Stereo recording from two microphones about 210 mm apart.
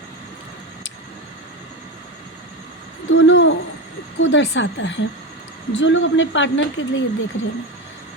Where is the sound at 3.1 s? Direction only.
65° left (ahead or behind).